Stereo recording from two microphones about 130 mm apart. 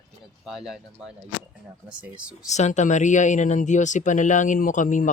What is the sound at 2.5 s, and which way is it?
Speech, 65° left (ahead or behind).